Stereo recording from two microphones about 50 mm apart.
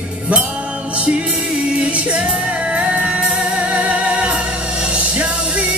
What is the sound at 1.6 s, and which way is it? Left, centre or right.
Music, right.